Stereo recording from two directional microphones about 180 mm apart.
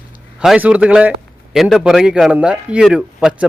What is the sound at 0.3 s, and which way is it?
A man's voice, 5° right (ahead or behind).